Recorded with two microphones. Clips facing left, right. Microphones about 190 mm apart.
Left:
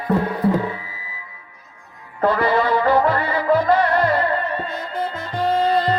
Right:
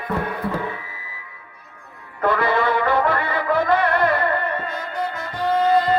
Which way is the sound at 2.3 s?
55° right (ahead or behind).